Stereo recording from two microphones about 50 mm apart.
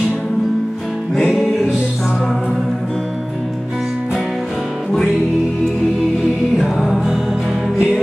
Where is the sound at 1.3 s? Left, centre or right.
Centre.